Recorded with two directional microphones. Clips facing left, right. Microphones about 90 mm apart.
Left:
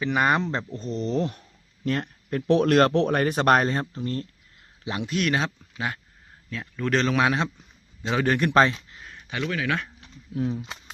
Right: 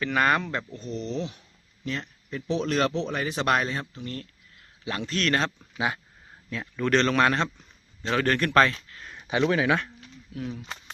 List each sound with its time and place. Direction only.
0.0 s speech: 20° left (ahead or behind); by 4.3 s 35° left (ahead or behind)
4.9 s speech: 15° left (ahead or behind)
5.5 s a man's voice: 5° right (ahead or behind); by 9.0 s 15° left (ahead or behind)
9.1 s speech: 20° right (ahead or behind)
10.0 s a sound: 30° left (ahead or behind)
10.7 s a sound: centre (ahead or behind)